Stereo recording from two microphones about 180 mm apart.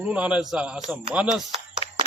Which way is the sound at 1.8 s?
30° left (ahead or behind).